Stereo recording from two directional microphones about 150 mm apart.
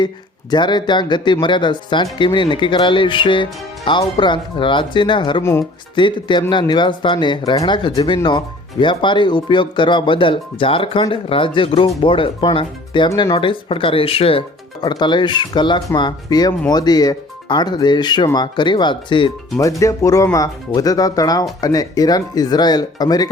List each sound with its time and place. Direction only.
0.5 s speech: 30° left (ahead or behind)
5.4 s speech: 20° left (ahead or behind)
6.0 s speech: 30° left (ahead or behind)
13.1 s speech: 20° left (ahead or behind)
13.3 s speech: 35° left (ahead or behind)
19.8 s speech: 20° left (ahead or behind)